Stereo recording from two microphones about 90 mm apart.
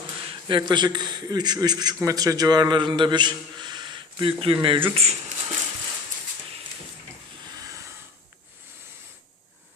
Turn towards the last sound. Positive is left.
turn(degrees=-40)  # may be behind; listen again after turning